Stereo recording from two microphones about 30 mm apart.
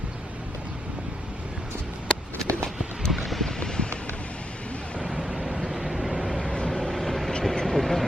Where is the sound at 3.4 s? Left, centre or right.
Left.